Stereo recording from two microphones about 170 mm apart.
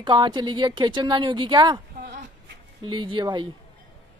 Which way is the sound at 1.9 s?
50° right (ahead or behind).